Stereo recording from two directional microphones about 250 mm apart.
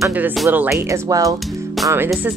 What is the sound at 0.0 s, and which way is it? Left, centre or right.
Speech, centre.